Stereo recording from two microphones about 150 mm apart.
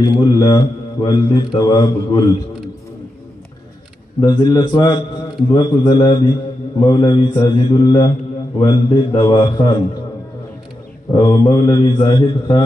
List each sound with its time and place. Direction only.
0.0 s speech: 25° left (ahead or behind)
4.2 s a man's voice: 30° left (ahead or behind)
11.1 s speech: 25° left (ahead or behind)